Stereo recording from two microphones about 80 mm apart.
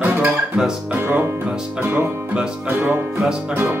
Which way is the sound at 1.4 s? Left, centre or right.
Centre.